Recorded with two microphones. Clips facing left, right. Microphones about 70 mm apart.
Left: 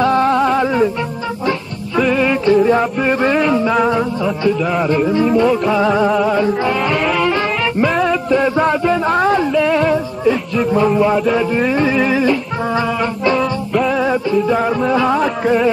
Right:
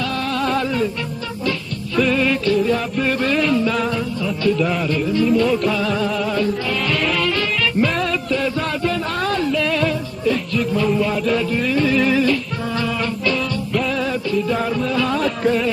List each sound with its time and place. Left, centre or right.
0.0 s music: left
2.0 s music: centre; by 5.4 s left
5.4 s music: left
8.1 s a sound: left
10.6 s speech: left
11.3 s music: left
14.0 s music: left